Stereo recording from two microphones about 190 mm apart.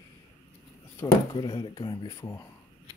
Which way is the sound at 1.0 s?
15° left (ahead or behind).